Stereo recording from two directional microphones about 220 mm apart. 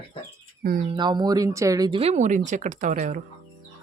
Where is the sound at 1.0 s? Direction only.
20° right (ahead or behind); by 3.2 s 35° right (ahead or behind).